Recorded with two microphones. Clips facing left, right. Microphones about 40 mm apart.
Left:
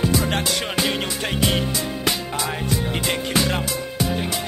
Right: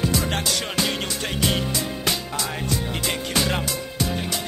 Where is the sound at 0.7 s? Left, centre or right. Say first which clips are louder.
Left 2 dB; centre.